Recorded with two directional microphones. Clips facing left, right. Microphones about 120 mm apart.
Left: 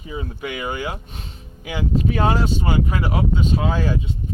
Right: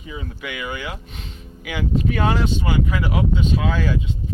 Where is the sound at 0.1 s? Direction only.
35° left (ahead or behind).